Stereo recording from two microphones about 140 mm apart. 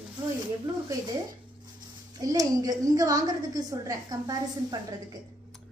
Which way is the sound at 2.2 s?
25° right (ahead or behind).